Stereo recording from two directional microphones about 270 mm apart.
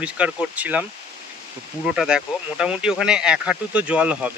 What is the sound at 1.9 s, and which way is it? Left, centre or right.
Speech, centre.